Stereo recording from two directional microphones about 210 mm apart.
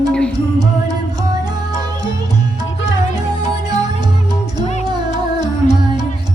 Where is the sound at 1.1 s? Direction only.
20° right (ahead or behind).